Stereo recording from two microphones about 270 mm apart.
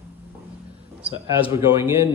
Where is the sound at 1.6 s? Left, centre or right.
Centre.